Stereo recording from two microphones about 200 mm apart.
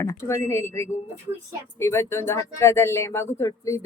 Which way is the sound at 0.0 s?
15° left (ahead or behind).